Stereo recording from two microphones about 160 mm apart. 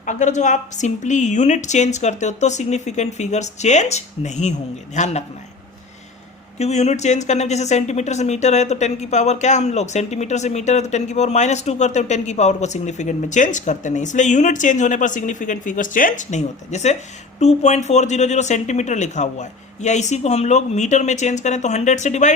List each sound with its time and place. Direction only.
0.0 s speech: 50° left (ahead or behind)
6.6 s speech: 45° left (ahead or behind)